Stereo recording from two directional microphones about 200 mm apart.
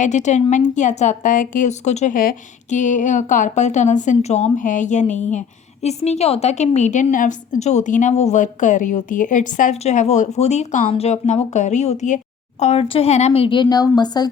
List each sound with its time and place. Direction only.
0.0 s a woman's voice: 35° left (ahead or behind); by 14.3 s 20° left (ahead or behind)